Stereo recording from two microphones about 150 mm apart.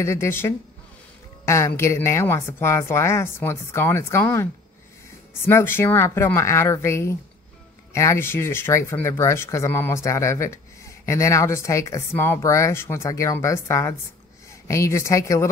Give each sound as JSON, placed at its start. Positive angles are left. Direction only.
{"t": 0.0, "sound": "a woman's voice", "side_deg": 20}